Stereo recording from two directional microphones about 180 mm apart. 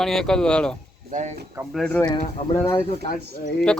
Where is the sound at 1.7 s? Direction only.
5° left (ahead or behind).